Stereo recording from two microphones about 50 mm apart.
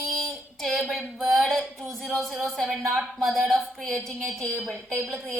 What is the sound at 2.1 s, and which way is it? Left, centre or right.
A woman's voice, centre.